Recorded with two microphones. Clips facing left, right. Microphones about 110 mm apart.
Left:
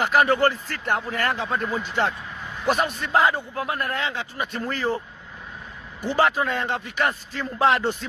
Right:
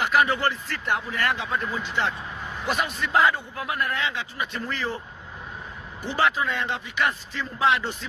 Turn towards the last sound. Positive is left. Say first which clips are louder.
# left 3 dB
turn(degrees=45)  # may be behind; listen again after turning